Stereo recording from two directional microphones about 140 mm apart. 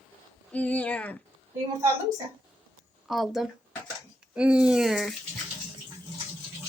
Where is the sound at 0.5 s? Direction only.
10° left (ahead or behind).